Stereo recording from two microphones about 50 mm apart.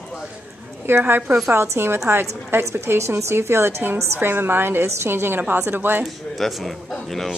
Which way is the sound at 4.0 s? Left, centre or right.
Right.